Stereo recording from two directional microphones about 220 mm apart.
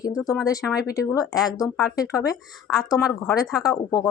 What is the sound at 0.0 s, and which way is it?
A woman's voice, 15° left (ahead or behind).